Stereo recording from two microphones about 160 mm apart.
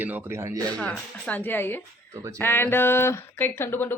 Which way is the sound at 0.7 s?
5° left (ahead or behind).